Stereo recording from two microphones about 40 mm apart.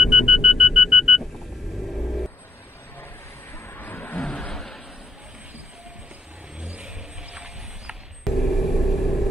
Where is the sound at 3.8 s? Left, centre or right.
Left.